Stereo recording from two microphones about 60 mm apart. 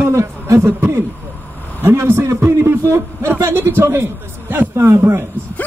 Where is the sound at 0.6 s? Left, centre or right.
Right.